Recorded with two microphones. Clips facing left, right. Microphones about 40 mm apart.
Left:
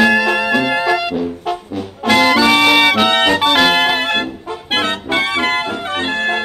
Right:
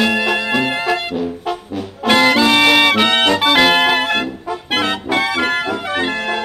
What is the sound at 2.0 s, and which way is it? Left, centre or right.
Music, centre.